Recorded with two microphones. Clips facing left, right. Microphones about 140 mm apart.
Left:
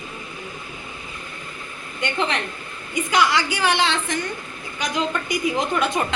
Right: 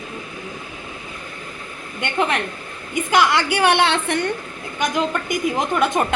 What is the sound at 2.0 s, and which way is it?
A woman's voice, 50° right (ahead or behind).